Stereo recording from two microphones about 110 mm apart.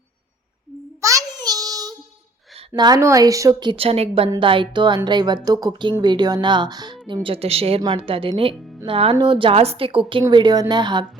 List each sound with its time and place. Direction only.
1.0 s a sound: 35° right (ahead or behind)
2.7 s a woman's voice: 40° right (ahead or behind)
3.6 s speech: 55° right (ahead or behind)
4.4 s a woman's voice: 50° right (ahead or behind)
7.1 s speech: 50° right (ahead or behind)
7.8 s a woman's voice: 50° right (ahead or behind)
10.2 s speech: 40° right (ahead or behind)